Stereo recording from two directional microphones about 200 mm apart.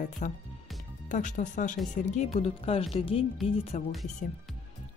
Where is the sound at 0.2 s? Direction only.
40° left (ahead or behind).